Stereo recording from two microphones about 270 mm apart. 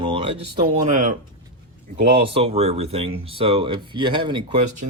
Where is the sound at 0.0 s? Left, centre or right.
Centre.